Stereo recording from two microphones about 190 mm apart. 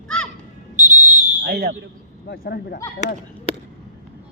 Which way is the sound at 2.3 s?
55° left (ahead or behind).